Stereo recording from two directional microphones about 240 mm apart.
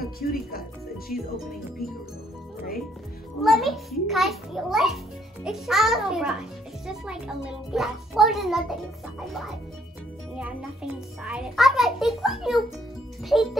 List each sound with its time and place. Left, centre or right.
0.2 s speech: left
3.4 s a child's voice: centre